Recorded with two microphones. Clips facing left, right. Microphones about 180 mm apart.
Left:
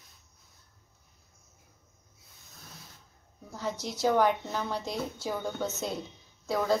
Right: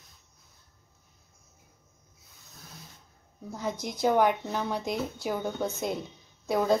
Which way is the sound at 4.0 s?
15° right (ahead or behind).